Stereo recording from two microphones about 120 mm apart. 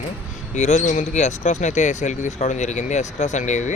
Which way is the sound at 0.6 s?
75° left (ahead or behind).